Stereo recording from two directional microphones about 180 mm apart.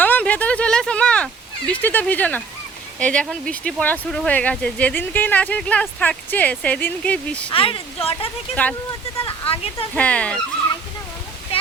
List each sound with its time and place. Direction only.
0.0 s a sound: 10° left (ahead or behind)
3.0 s speech: 5° left (ahead or behind)
7.5 s speech: 30° left (ahead or behind)
9.9 s speech: 5° left (ahead or behind)